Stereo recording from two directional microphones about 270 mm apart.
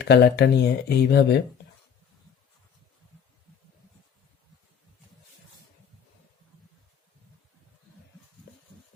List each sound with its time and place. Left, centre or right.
0.0 s speech: left